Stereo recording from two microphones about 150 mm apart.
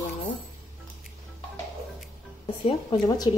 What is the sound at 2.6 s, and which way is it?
Speech, 35° left (ahead or behind).